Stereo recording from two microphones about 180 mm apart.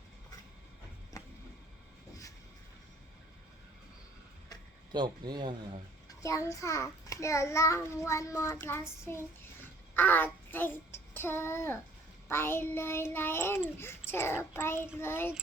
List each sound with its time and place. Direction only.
1.2 s a sound: 20° left (ahead or behind)
4.9 s speech: 25° right (ahead or behind)
6.1 s a child's voice: 20° left (ahead or behind)